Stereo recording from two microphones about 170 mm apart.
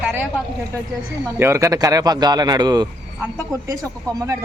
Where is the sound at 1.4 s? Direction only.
15° right (ahead or behind).